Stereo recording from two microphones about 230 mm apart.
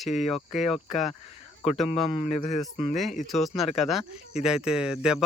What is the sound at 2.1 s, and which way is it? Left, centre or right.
Speech, left.